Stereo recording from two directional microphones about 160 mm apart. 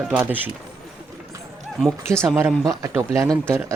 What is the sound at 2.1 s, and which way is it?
A man's voice, 20° right (ahead or behind).